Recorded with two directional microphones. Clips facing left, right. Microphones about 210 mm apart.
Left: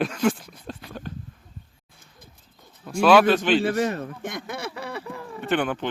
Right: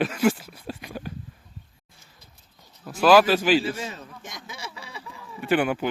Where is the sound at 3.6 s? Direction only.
65° left (ahead or behind).